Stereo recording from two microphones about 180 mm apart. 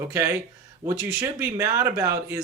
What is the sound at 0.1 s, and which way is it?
Speech, 15° right (ahead or behind).